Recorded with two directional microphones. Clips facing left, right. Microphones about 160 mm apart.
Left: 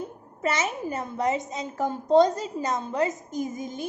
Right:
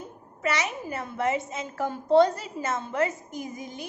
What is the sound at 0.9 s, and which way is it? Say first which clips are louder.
A woman's voice: even; 20° left (ahead or behind).